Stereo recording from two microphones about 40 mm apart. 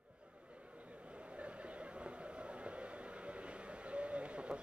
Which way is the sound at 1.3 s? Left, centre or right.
Right.